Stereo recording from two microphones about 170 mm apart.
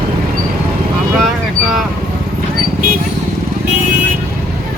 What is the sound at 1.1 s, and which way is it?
Speech, centre (ahead or behind).